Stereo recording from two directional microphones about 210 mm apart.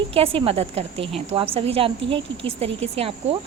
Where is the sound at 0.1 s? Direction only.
25° right (ahead or behind).